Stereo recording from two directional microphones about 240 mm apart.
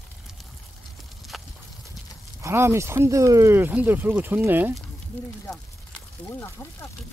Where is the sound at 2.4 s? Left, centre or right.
Centre.